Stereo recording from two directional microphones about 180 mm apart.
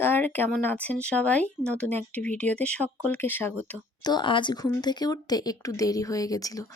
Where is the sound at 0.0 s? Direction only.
10° left (ahead or behind).